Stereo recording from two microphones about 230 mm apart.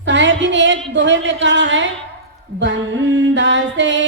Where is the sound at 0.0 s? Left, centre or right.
Right.